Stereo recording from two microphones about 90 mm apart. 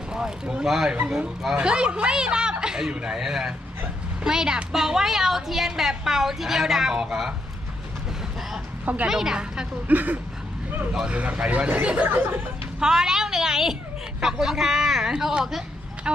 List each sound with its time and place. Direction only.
0.1 s a woman's voice: 10° right (ahead or behind)
9.0 s speech: 5° right (ahead or behind)
9.9 s speech: 20° right (ahead or behind)
12.8 s a woman's voice: 5° right (ahead or behind)